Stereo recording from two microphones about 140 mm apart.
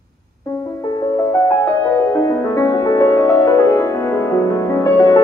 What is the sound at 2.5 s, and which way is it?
Music, 25° left (ahead or behind).